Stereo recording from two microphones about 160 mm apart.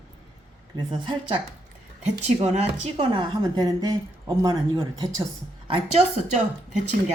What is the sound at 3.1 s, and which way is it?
Speech, 25° right (ahead or behind).